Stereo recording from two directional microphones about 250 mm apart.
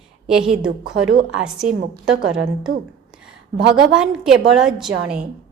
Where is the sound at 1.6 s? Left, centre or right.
Right.